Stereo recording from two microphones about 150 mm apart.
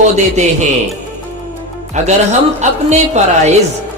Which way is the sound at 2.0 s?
50° right (ahead or behind).